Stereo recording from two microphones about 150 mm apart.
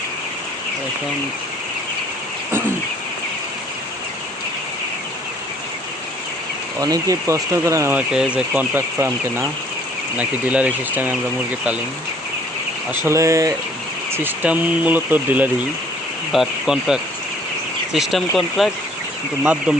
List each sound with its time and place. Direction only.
6.8 s speech: 25° right (ahead or behind)
7.9 s speech: 5° right (ahead or behind)
13.1 s speech: 20° right (ahead or behind)